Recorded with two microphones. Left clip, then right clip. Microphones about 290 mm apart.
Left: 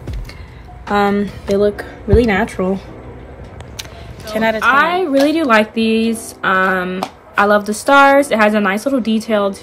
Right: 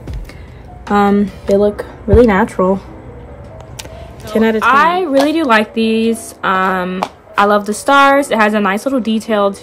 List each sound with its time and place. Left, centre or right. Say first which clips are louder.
0.8 s speech: right 2 dB; centre
2.1 s speech: right 4 dB; right
3.7 s a sound: left 1 dB; centre
5.2 s a woman's voice: left 1 dB; centre